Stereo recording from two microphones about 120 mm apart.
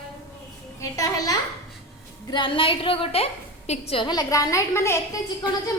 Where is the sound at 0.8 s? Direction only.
30° left (ahead or behind).